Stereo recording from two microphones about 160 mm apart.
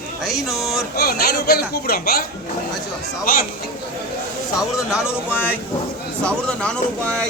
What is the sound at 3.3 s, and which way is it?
Speech, 65° left (ahead or behind).